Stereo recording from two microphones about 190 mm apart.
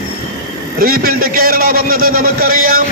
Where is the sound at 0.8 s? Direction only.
50° right (ahead or behind).